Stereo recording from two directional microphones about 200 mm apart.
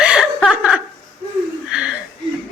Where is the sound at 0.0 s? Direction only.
5° right (ahead or behind).